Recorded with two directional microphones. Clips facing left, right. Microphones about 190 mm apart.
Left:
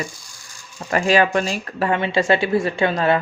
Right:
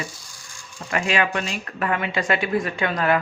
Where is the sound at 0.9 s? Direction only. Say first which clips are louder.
Left 6 dB; 35° left (ahead or behind).